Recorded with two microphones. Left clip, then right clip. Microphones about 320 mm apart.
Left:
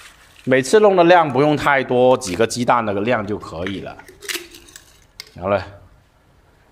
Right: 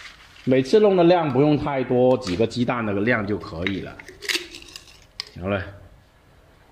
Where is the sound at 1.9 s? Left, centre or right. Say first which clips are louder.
Left 2 dB; left.